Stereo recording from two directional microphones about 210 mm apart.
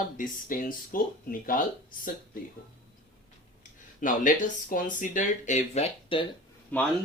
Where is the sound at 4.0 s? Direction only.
40° left (ahead or behind).